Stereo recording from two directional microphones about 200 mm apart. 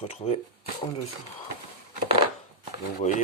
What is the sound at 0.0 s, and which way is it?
Speech, 35° left (ahead or behind).